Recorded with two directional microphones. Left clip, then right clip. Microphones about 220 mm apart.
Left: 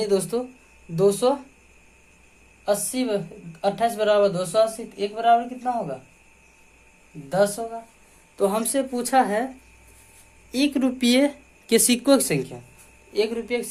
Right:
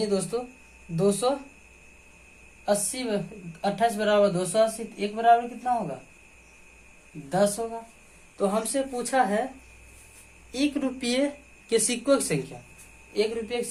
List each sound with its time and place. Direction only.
0.0 s speech: 40° left (ahead or behind)
2.6 s speech: 40° left (ahead or behind)
7.3 s speech: 35° left (ahead or behind)
10.5 s speech: 45° left (ahead or behind)